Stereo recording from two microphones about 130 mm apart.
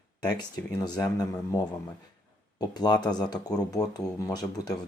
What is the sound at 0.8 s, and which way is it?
Speech, 30° left (ahead or behind).